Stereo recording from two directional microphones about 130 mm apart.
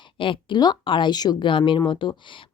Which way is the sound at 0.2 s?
40° left (ahead or behind).